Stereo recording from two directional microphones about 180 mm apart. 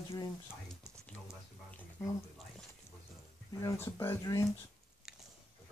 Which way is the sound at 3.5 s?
15° left (ahead or behind).